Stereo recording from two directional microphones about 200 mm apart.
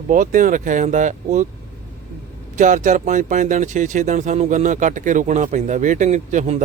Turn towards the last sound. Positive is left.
turn(degrees=-35)  # may be behind; listen again after turning